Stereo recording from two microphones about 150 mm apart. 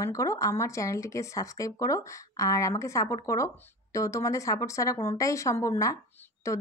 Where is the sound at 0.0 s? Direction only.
20° left (ahead or behind).